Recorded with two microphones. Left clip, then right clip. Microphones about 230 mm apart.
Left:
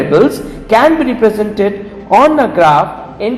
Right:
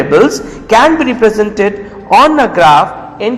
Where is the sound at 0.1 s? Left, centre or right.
Right.